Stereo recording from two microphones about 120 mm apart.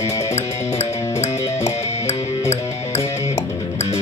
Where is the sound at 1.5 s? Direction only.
65° left (ahead or behind).